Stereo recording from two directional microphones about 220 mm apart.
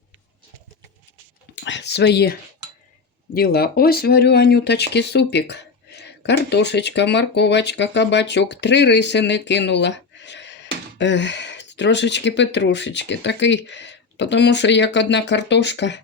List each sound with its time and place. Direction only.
1.6 s whispering: 55° left (ahead or behind)
3.3 s speech: 45° left (ahead or behind)